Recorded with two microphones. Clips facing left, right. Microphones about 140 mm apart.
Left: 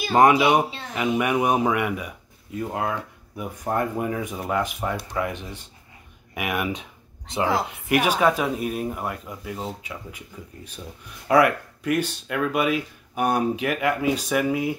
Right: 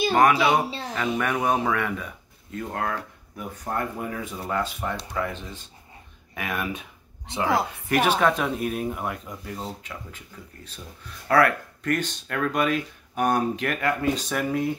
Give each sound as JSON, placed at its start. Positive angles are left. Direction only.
{"t": 0.1, "sound": "speech", "side_deg": 20}
{"t": 0.7, "sound": "a sound", "side_deg": -35}
{"t": 0.9, "sound": "speech", "side_deg": 15}